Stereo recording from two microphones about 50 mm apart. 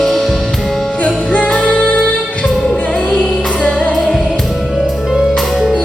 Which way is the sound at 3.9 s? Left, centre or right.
Centre.